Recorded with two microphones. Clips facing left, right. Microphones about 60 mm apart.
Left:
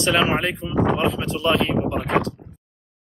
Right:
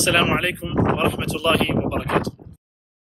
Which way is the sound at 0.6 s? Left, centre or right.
Centre.